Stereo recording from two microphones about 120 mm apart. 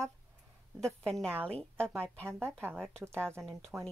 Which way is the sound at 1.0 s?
5° left (ahead or behind).